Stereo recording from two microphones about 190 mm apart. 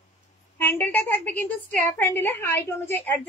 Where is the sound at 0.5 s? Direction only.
10° left (ahead or behind).